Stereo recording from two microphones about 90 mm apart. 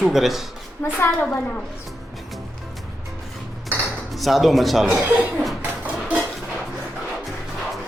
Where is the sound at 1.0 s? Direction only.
20° left (ahead or behind).